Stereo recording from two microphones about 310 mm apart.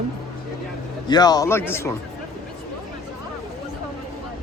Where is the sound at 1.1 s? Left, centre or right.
Centre.